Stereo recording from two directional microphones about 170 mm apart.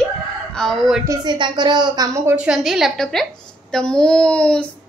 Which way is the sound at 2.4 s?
5° right (ahead or behind).